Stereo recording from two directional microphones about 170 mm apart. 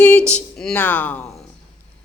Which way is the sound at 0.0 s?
10° left (ahead or behind).